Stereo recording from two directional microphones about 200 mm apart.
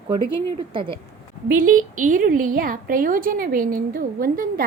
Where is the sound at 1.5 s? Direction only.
45° right (ahead or behind).